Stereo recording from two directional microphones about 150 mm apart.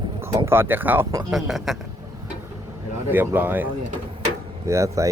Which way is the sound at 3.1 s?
15° right (ahead or behind).